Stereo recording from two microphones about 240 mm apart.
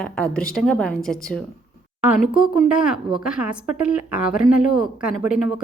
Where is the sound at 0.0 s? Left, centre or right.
Centre.